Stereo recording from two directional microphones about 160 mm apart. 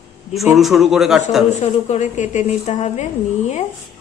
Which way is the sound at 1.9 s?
45° left (ahead or behind).